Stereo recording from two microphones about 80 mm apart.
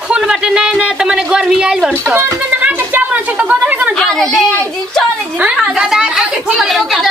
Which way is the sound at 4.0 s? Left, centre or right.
Centre.